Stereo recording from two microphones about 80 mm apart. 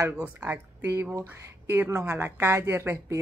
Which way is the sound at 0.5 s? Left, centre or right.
Right.